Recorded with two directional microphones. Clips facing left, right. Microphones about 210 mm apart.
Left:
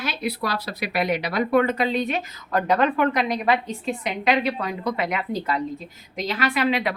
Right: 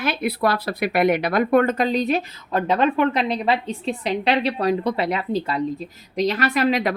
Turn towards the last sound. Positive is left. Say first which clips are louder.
# right 3 dB
turn(degrees=-40)  # may be behind; listen again after turning